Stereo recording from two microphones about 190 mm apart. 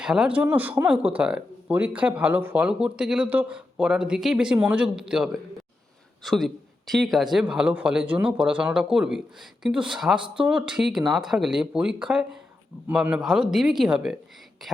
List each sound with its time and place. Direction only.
0.0 s a man's voice: 5° right (ahead or behind)